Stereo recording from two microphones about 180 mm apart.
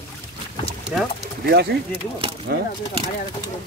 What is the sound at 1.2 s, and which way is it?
Speech, 65° right (ahead or behind).